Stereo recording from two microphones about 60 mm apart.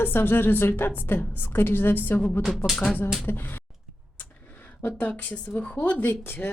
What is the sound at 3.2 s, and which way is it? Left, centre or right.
Speech, left.